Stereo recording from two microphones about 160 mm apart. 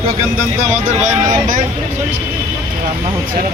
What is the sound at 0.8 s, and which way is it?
Speech, 55° right (ahead or behind).